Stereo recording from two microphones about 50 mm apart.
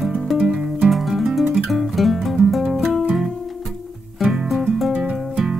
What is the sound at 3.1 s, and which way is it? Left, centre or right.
Music, centre.